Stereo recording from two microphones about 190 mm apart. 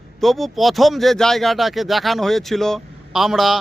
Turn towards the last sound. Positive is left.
turn(degrees=0)  # may be behind; listen again after turning